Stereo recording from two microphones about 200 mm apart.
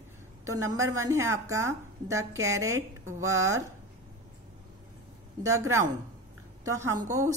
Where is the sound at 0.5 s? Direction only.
80° right.